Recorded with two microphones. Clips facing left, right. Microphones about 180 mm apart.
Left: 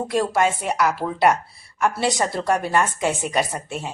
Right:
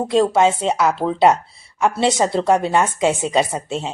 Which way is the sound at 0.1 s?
25° right (ahead or behind).